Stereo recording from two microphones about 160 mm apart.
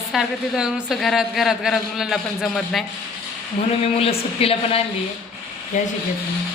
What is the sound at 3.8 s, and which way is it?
Speech, 35° left (ahead or behind).